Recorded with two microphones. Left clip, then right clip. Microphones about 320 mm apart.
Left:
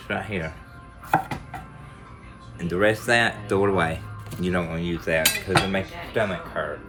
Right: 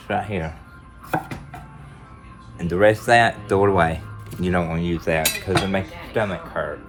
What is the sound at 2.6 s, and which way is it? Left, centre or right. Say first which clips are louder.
Speech: right 5 dB; centre.